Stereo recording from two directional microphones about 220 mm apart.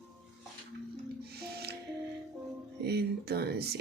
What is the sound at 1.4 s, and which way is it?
Music, 45° right (ahead or behind).